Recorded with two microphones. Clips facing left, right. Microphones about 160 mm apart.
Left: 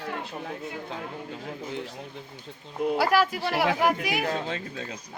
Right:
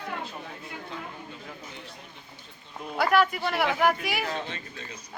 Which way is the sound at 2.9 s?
5° left (ahead or behind).